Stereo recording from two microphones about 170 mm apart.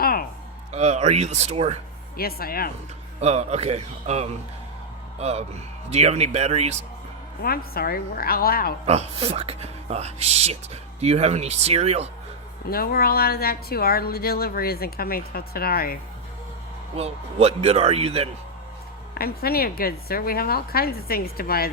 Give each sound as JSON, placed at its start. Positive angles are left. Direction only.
{"t": 0.0, "sound": "a sound", "side_deg": 60}
{"t": 0.7, "sound": "speech", "side_deg": -40}
{"t": 2.1, "sound": "a woman's voice", "side_deg": 60}
{"t": 3.2, "sound": "speech", "side_deg": -40}
{"t": 7.4, "sound": "a woman's voice", "side_deg": 60}
{"t": 8.9, "sound": "speech", "side_deg": -35}
{"t": 12.7, "sound": "a woman's voice", "side_deg": 60}
{"t": 16.9, "sound": "speech", "side_deg": -35}
{"t": 19.1, "sound": "a woman's voice", "side_deg": 65}